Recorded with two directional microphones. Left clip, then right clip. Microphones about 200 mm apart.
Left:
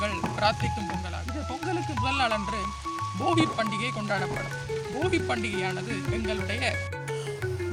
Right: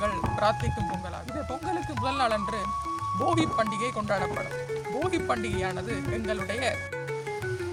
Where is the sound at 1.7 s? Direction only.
10° right (ahead or behind).